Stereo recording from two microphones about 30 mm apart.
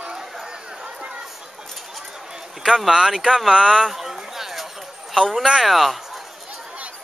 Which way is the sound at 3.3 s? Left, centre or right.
Centre.